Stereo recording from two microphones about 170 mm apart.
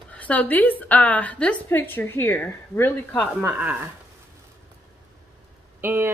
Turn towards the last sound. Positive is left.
turn(degrees=-15)  # may be behind; listen again after turning